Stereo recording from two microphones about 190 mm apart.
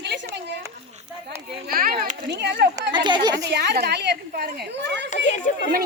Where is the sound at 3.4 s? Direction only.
60° right (ahead or behind).